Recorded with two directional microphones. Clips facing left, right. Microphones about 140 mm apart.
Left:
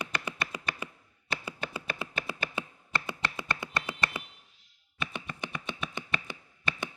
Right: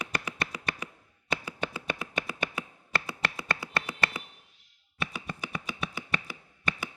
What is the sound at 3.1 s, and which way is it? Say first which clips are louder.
Finger snapping: right 1 dB; 25° left (ahead or behind).